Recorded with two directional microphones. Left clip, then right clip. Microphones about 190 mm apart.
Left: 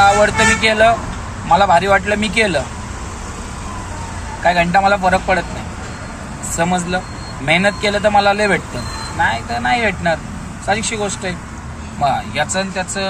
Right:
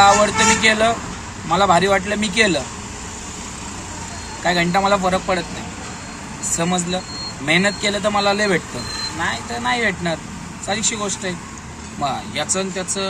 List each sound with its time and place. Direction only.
0.4 s a man's voice: 15° right (ahead or behind)
4.5 s a man's voice: 15° right (ahead or behind)
6.6 s a man's voice: 15° right (ahead or behind)